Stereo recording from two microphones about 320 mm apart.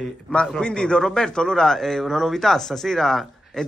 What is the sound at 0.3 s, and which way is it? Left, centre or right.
A man's voice, centre.